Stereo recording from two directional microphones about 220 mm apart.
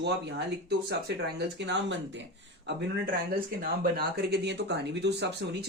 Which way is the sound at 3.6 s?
45° right (ahead or behind).